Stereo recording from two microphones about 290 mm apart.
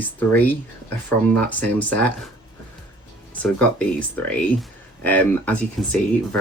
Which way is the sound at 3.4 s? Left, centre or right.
Centre.